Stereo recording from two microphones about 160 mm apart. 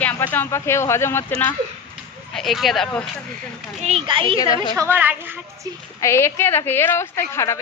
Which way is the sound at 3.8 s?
35° right (ahead or behind).